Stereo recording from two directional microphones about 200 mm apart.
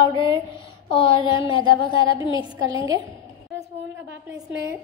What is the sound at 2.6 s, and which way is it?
Speech, 20° right (ahead or behind).